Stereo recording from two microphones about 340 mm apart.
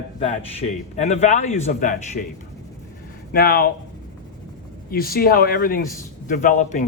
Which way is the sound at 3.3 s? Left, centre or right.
Left.